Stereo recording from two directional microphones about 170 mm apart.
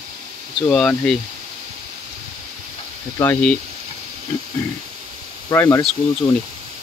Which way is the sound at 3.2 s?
15° left (ahead or behind).